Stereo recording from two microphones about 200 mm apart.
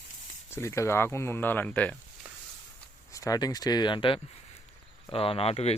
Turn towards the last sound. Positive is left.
turn(degrees=30)  # may be behind; listen again after turning